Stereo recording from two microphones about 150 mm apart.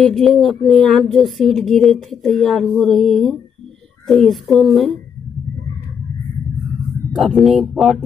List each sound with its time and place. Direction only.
0.0 s speech: centre (ahead or behind)
7.1 s speech: centre (ahead or behind)